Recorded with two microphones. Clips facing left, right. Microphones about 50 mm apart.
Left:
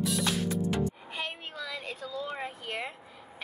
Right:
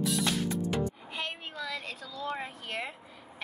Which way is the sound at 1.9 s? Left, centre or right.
Centre.